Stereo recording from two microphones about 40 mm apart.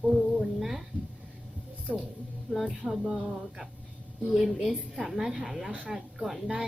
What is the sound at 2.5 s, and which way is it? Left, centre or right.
Speech, centre.